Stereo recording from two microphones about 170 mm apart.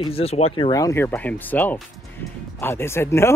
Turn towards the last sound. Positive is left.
turn(degrees=15)  # may be behind; listen again after turning